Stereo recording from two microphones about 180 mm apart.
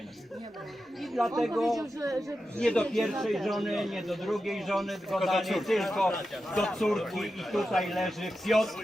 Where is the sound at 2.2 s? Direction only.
5° left (ahead or behind).